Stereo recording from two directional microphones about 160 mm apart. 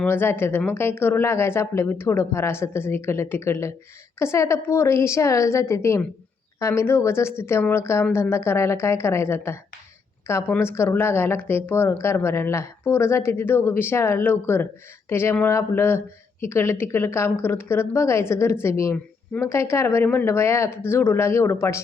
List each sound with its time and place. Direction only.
0.0 s speech: 10° left (ahead or behind)